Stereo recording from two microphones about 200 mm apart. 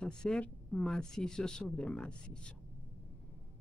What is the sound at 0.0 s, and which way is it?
Speech, 5° left (ahead or behind).